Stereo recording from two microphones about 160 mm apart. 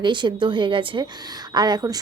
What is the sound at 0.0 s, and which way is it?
A woman's voice, 30° right (ahead or behind).